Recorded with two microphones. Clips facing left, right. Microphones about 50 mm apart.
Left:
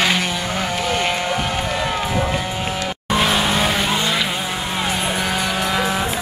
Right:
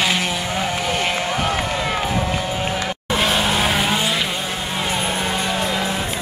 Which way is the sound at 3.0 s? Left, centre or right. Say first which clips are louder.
Left 2 dB; centre.